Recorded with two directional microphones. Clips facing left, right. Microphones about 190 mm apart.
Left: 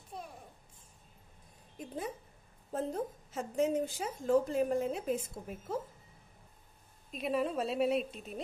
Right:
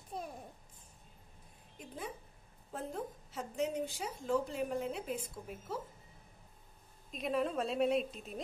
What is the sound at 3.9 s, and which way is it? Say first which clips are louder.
A woman's voice: left 5 dB; 50° left (ahead or behind).